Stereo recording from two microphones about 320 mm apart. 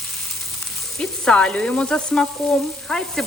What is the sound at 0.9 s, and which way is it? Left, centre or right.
A woman's voice, centre.